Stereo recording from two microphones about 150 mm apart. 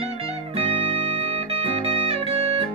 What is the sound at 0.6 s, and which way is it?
Music, 40° right (ahead or behind).